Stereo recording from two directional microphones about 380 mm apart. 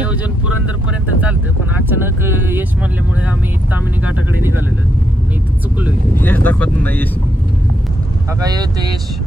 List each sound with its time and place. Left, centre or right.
1.9 s speech: centre
5.8 s speech: centre
8.4 s speech: centre